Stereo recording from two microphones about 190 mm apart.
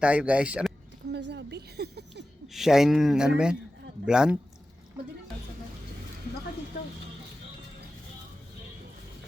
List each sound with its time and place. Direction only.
0.0 s speech: 5° right (ahead or behind)
1.1 s a sound: 65° right (ahead or behind)
2.5 s speech: centre (ahead or behind)